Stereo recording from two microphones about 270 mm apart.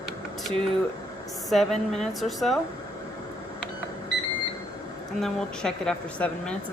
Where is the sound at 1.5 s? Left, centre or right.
Centre.